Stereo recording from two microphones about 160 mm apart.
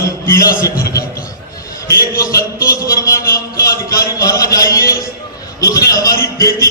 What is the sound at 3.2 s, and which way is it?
Speech, 70° left (ahead or behind).